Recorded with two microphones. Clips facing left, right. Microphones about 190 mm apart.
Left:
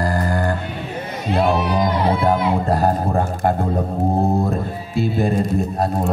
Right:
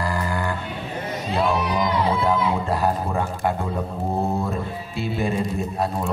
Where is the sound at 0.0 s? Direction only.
45° left (ahead or behind).